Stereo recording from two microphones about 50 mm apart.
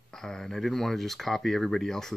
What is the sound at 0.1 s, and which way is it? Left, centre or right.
Speech, centre.